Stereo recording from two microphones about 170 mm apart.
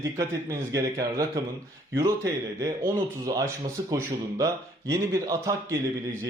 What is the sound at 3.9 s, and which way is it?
A man's voice, 20° right (ahead or behind).